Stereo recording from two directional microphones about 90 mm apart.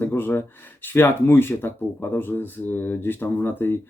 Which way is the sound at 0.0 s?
25° left (ahead or behind).